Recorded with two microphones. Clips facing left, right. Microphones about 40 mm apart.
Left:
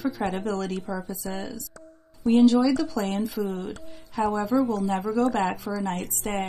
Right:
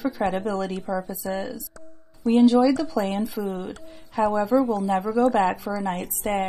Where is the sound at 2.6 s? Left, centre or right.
Centre.